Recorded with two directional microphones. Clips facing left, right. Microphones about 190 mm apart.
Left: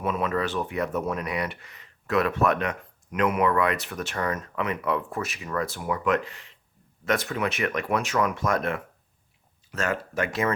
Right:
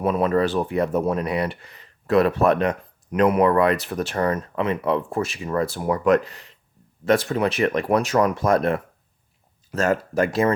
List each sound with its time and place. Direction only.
0.0 s speech: 35° right (ahead or behind)